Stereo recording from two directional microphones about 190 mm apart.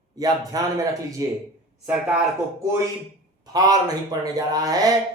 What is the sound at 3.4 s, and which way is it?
A man's voice, 20° right (ahead or behind).